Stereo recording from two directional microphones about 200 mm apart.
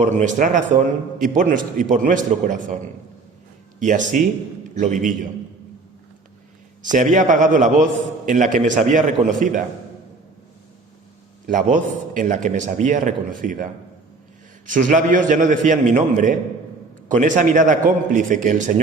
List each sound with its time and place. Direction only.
0.0 s a man's voice: 40° right (ahead or behind)
6.8 s a man's voice: 40° right (ahead or behind)
11.4 s a man's voice: 40° right (ahead or behind)
14.7 s a man's voice: 40° right (ahead or behind)